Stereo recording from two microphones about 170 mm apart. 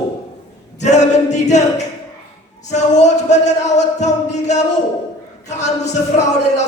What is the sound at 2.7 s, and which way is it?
Music, 45° left (ahead or behind).